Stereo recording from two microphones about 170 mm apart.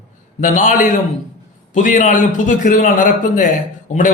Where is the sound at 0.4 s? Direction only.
45° left (ahead or behind).